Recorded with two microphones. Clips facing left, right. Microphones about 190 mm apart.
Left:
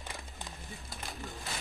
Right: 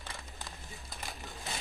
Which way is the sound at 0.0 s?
20° left (ahead or behind).